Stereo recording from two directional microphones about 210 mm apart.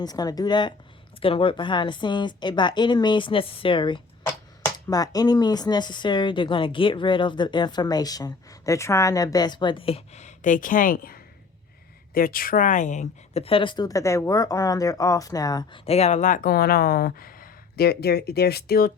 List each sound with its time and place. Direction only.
0.0 s a woman's voice: 20° left (ahead or behind); by 18.9 s 50° left (ahead or behind)